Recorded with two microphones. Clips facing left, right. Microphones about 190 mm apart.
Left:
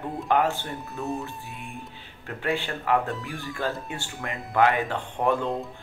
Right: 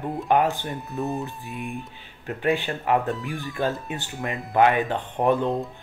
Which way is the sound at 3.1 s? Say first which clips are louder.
Right 4 dB; centre (ahead or behind).